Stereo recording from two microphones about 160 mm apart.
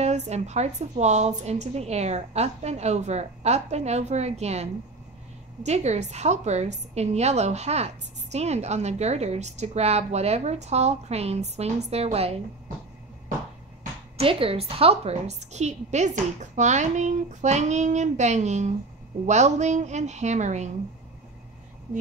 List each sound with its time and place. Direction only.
0.0 s a woman's voice: 45° right (ahead or behind)
14.1 s a woman's voice: 35° right (ahead or behind)